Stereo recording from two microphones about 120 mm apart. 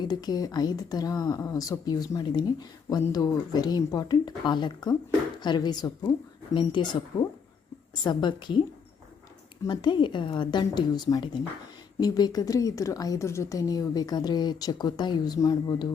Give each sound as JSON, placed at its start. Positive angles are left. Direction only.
{"t": 0.0, "sound": "a woman's voice", "side_deg": 35}
{"t": 9.6, "sound": "a woman's voice", "side_deg": 40}